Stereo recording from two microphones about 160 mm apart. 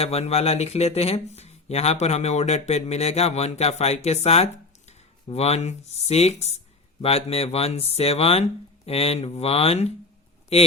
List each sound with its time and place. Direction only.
0.0 s speech: 40° left (ahead or behind)